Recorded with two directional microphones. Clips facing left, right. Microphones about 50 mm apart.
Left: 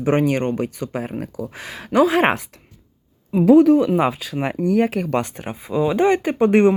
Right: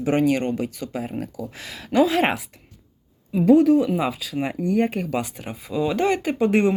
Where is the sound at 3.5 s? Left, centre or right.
Left.